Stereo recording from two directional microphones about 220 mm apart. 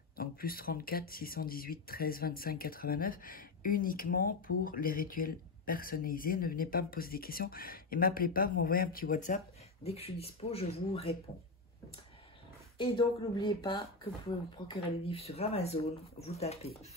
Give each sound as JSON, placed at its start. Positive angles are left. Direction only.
{"t": 0.1, "sound": "speech", "side_deg": 40}
{"t": 9.8, "sound": "speech", "side_deg": 25}
{"t": 12.7, "sound": "speech", "side_deg": 20}